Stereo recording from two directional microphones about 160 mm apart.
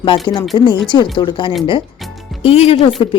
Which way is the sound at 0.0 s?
30° left (ahead or behind).